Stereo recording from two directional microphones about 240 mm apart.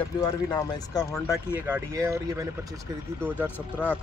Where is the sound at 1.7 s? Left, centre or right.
Centre.